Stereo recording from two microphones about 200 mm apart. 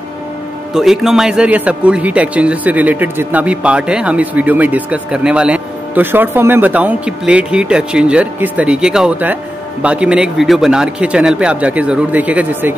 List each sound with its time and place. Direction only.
0.7 s a man's voice: centre (ahead or behind)